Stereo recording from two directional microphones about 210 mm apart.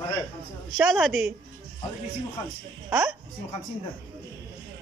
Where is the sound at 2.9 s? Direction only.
5° right (ahead or behind).